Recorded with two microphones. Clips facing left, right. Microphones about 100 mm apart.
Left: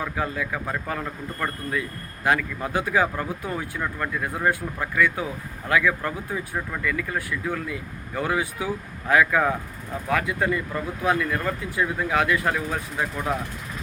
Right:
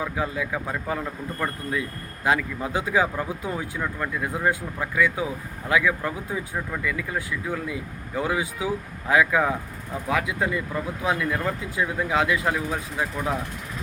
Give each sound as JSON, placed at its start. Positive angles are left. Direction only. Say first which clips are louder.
{"t": 0.0, "sound": "speech", "louder": "even", "side_deg": -15}